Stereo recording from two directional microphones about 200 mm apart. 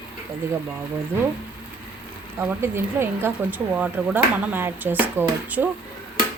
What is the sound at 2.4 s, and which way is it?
Speech, 10° right (ahead or behind).